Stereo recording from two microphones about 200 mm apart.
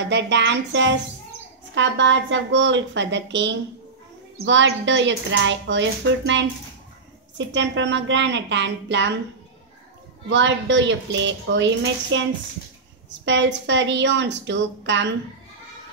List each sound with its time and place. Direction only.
0.0 s speech: 60° right (ahead or behind)
10.3 s speech: 65° right (ahead or behind)